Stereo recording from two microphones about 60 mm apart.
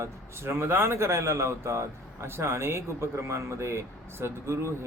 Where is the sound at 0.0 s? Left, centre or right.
Right.